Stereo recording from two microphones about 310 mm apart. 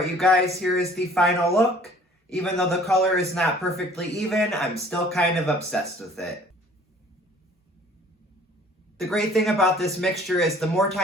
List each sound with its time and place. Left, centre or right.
0.0 s speech: centre
9.0 s speech: centre